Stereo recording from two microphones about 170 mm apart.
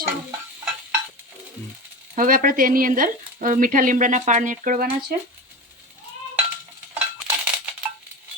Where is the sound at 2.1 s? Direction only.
55° right (ahead or behind).